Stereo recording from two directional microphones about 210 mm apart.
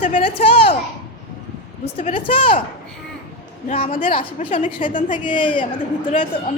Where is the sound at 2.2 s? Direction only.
25° left (ahead or behind).